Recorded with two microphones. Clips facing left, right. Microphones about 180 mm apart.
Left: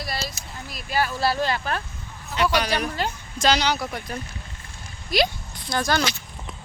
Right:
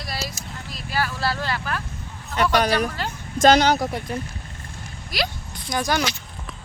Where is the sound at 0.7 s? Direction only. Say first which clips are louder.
Left 2 dB; 15° left (ahead or behind).